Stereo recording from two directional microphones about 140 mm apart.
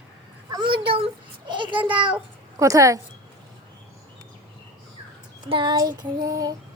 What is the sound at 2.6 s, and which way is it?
Female singing, 25° right (ahead or behind).